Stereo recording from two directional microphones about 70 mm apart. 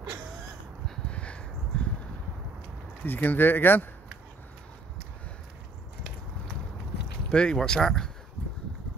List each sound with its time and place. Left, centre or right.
0.8 s a sound: centre
3.0 s speech: left
7.2 s speech: centre